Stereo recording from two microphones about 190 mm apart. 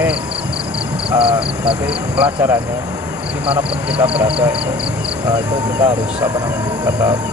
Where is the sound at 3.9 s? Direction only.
30° right (ahead or behind).